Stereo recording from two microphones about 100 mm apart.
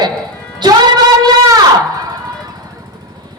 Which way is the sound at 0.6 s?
50° right (ahead or behind).